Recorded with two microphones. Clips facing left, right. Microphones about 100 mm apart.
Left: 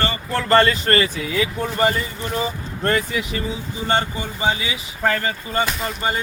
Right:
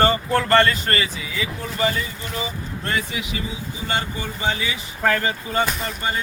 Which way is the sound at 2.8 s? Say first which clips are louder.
Left 6 dB; 50° left (ahead or behind).